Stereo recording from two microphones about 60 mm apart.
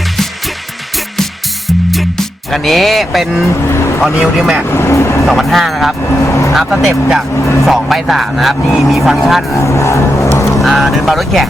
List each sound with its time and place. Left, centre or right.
1.1 s music: centre
4.2 s speech: centre
4.7 s vehicle: left
5.2 s speech: centre
6.1 s speech: left
6.5 s speech: centre
9.6 s music: left
10.6 s speech: centre